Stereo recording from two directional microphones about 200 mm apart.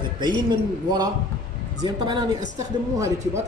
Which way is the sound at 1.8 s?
20° right (ahead or behind).